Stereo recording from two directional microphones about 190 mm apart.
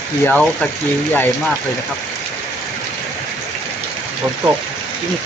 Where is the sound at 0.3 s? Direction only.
5° left (ahead or behind).